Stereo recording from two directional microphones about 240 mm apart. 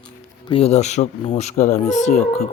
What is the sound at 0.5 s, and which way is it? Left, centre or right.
Speech, left.